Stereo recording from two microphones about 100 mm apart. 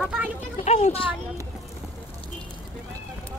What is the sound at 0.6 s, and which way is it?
Speech, 80° left.